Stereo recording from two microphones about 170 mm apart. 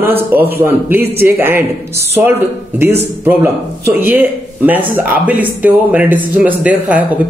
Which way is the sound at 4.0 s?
10° right (ahead or behind).